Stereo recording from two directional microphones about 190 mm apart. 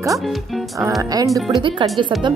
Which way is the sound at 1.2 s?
Centre (ahead or behind).